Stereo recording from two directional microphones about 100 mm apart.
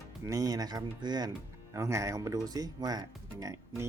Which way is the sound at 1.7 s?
30° right (ahead or behind).